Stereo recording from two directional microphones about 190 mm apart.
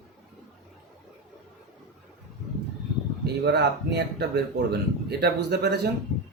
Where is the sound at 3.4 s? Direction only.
65° right (ahead or behind).